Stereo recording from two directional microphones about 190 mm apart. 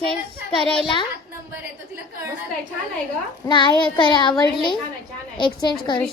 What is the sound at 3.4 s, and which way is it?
A woman's voice, 25° left (ahead or behind).